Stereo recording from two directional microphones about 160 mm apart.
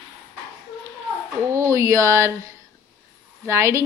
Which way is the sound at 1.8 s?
20° right (ahead or behind).